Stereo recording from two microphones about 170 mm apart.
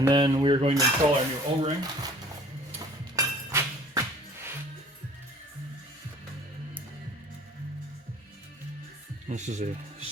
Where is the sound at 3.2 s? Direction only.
20° right (ahead or behind).